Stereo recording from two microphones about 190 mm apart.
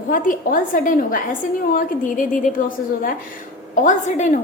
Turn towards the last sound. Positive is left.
turn(degrees=40)  # may be behind; listen again after turning